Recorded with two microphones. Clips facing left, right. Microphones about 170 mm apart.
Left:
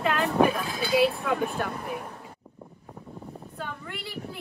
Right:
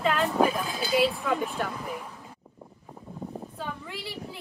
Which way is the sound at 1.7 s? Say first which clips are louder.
Left 2 dB; 55° left (ahead or behind).